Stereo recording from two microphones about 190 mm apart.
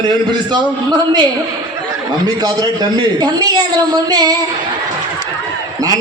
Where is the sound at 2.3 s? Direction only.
20° right (ahead or behind).